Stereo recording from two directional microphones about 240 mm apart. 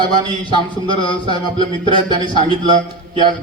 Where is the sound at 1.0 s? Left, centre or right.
Left.